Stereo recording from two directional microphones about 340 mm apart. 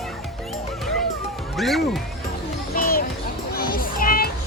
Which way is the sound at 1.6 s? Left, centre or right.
Centre.